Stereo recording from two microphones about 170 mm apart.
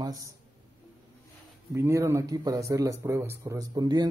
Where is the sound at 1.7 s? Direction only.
15° right (ahead or behind).